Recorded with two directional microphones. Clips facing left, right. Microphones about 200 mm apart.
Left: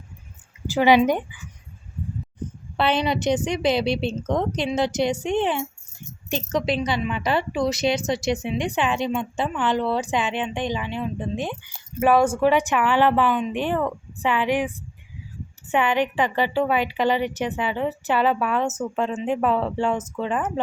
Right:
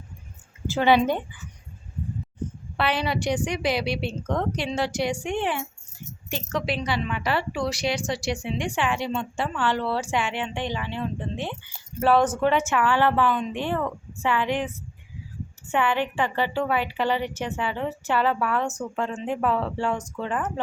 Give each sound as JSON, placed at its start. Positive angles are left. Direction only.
{"t": 0.7, "sound": "speech", "side_deg": 15}
{"t": 2.7, "sound": "a woman's voice", "side_deg": 25}